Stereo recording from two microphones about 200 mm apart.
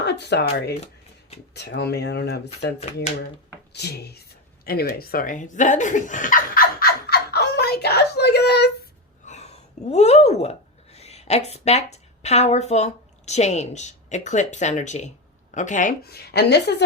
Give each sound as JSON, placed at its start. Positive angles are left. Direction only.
{"t": 0.0, "sound": "speech", "side_deg": 55}
{"t": 4.6, "sound": "chuckle", "side_deg": 50}
{"t": 9.2, "sound": "a sound", "side_deg": 35}
{"t": 10.9, "sound": "a woman's voice", "side_deg": 30}